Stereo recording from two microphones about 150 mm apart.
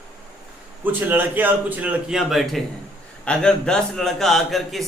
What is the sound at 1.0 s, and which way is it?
A man's voice, 10° right (ahead or behind).